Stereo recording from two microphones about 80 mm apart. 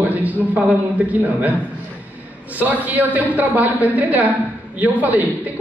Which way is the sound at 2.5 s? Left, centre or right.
Right.